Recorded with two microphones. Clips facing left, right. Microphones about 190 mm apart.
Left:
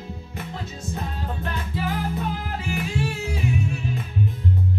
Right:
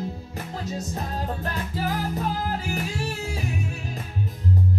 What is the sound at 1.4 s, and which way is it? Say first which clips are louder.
Music: even; 40° right (ahead or behind).